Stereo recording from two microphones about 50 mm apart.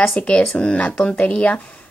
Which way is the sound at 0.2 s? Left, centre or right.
Left.